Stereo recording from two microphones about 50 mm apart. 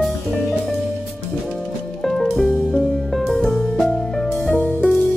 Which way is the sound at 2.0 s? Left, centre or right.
Centre.